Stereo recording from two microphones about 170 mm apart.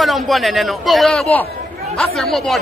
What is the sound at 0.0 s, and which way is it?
Speech, centre (ahead or behind).